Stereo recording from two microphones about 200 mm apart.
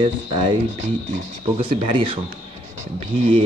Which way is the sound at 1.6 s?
25° right (ahead or behind).